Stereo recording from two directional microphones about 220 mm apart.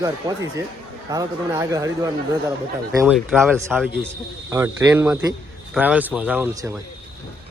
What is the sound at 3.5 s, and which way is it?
Speech, 10° right (ahead or behind).